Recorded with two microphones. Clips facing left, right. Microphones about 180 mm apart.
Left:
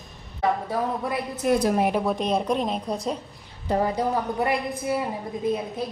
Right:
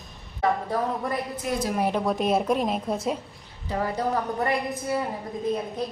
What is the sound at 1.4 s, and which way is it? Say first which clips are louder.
Speech: left 8 dB; 50° left (ahead or behind).